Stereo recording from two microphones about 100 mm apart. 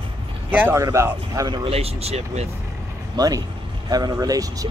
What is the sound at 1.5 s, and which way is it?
Speech, 70° right (ahead or behind).